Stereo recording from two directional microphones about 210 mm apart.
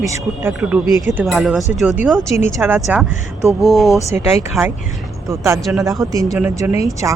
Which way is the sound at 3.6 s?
Centre (ahead or behind).